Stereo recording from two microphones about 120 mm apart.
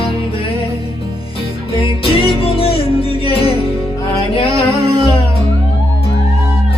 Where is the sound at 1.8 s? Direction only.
50° left (ahead or behind).